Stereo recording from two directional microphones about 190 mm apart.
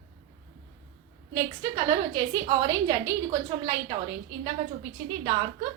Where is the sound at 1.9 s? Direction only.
20° right (ahead or behind).